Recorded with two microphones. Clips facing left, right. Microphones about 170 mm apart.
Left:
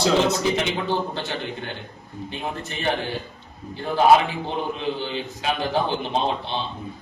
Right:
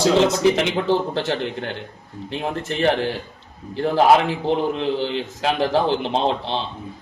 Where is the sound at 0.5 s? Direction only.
85° right.